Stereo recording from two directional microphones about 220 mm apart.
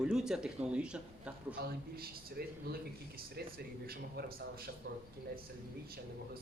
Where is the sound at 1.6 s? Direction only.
45° right (ahead or behind).